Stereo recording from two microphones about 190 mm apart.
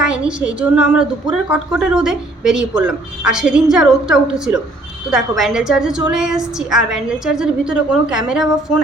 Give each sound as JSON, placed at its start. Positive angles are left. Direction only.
{"t": 0.0, "sound": "a woman's voice", "side_deg": -5}